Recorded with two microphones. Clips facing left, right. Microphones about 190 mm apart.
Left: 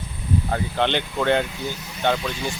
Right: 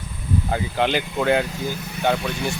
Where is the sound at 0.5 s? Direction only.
5° right (ahead or behind).